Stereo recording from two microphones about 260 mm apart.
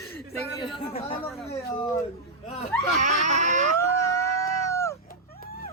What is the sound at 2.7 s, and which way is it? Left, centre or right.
Speech, centre.